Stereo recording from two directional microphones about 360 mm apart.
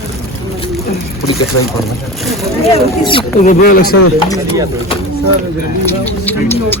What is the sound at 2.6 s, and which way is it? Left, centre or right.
Speech, centre.